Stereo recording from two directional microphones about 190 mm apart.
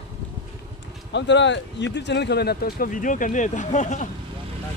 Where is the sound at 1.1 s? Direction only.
70° left (ahead or behind); by 4.1 s 40° left (ahead or behind).